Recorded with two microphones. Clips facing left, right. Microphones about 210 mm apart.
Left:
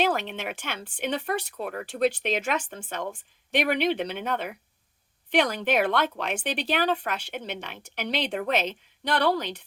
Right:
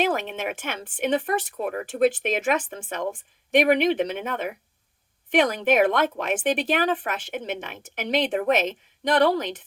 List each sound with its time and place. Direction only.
0.2 s speech: 50° right (ahead or behind)